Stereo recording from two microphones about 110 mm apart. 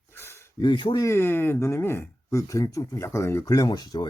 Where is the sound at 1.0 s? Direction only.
20° left (ahead or behind).